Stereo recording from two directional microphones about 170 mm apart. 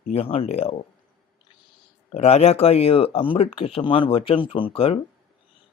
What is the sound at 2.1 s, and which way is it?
Speech, 40° left (ahead or behind).